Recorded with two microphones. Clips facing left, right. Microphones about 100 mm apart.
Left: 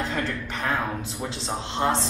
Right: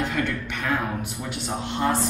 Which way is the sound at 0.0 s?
30° left (ahead or behind).